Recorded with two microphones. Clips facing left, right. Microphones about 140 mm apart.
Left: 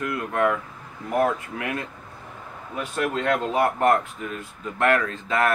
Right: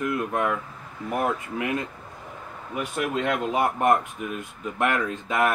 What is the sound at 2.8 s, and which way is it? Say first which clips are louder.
Speech: left 1 dB; 15° right (ahead or behind).